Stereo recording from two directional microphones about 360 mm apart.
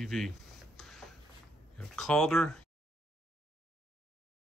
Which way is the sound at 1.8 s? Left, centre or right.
Centre.